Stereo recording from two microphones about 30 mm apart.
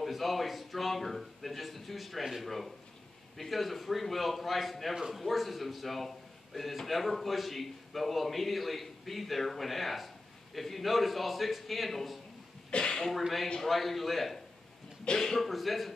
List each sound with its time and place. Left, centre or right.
0.0 s a man's voice: centre
12.7 s a sound: left
13.7 s a man's voice: centre
15.5 s a man's voice: centre